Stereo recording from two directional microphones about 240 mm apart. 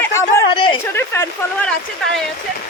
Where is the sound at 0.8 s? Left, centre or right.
Centre.